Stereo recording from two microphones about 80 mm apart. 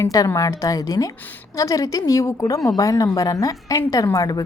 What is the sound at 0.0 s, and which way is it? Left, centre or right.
A woman's voice, left.